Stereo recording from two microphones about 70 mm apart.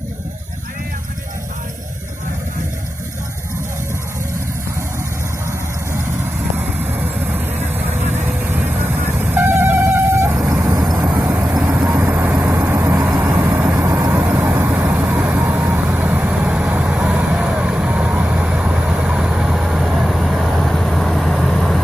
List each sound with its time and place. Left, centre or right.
6.8 s vehicle: right
10.7 s vehicle: right
12.0 s vehicle: right
13.1 s vehicle: right
13.4 s vehicle: right
13.7 s vehicle: right
14.2 s vehicle: right; by 21.8 s centre